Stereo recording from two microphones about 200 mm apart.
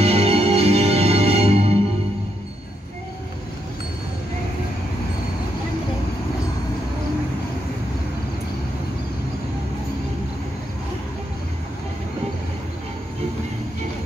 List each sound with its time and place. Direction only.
0.0 s music: 30° right (ahead or behind)